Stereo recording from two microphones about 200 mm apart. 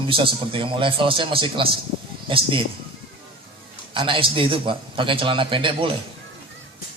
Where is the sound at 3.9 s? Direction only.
25° right (ahead or behind).